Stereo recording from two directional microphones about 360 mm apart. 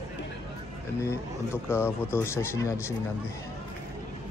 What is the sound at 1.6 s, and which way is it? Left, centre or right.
Speech, centre.